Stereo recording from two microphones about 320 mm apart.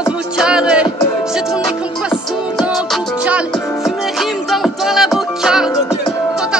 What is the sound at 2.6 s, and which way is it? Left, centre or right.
Music, centre.